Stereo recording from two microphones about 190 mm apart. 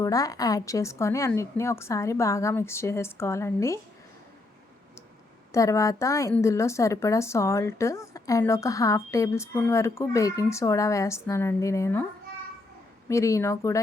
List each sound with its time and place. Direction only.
0.0 s a woman's voice: 20° left (ahead or behind)
5.5 s a woman's voice: 15° left (ahead or behind)
13.1 s a woman's voice: 15° left (ahead or behind)